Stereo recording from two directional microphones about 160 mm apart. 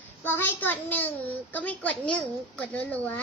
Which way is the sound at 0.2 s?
10° left (ahead or behind).